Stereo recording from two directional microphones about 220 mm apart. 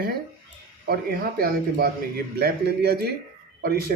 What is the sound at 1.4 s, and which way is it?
Speech, 45° right (ahead or behind).